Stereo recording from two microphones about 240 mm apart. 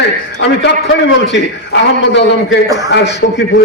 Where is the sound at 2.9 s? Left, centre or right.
Left.